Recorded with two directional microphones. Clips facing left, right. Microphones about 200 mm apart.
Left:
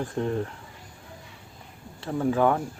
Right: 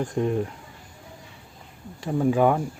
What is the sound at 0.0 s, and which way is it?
Speech, 15° right (ahead or behind).